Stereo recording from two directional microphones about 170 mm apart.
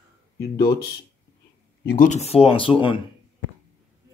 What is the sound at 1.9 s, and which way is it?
Speech, 50° left (ahead or behind).